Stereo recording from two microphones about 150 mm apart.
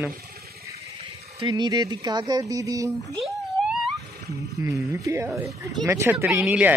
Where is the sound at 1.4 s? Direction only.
30° right (ahead or behind).